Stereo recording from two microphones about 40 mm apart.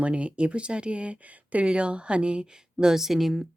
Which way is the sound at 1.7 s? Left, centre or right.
Right.